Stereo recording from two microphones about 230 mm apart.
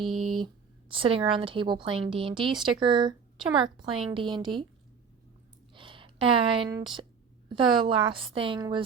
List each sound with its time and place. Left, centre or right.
0.0 s a sound: centre
0.3 s speech: right
5.7 s speech: right